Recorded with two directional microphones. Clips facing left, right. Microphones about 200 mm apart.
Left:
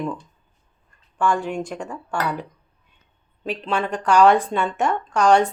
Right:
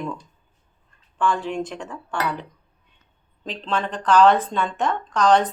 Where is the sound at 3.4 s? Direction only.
10° left (ahead or behind).